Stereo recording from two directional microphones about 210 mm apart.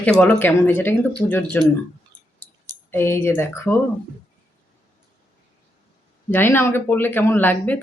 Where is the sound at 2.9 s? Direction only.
10° left (ahead or behind).